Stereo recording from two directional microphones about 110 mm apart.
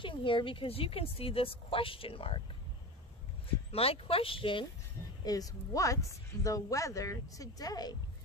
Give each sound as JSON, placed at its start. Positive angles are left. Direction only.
{"t": 0.0, "sound": "speech", "side_deg": 50}
{"t": 3.7, "sound": "speech", "side_deg": 60}
{"t": 5.2, "sound": "speech", "side_deg": 35}